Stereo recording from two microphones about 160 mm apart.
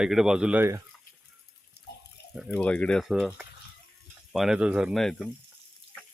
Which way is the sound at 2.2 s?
90° left.